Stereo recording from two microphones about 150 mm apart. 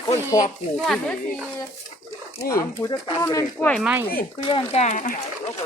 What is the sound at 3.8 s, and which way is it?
Speech, 5° right (ahead or behind).